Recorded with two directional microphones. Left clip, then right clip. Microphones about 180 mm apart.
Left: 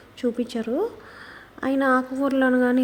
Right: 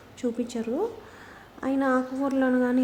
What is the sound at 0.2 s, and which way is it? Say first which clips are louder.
A woman's voice: left 4 dB; 20° left (ahead or behind).